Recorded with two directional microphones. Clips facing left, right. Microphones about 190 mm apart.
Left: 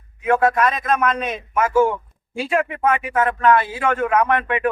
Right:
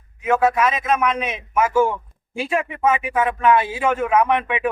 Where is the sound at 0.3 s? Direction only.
5° right (ahead or behind).